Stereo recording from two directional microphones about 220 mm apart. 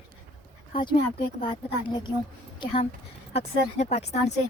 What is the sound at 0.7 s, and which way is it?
Speech, 25° left (ahead or behind).